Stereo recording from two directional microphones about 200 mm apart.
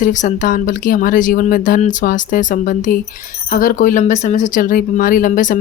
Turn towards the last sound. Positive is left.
turn(degrees=40)  # may be behind; listen again after turning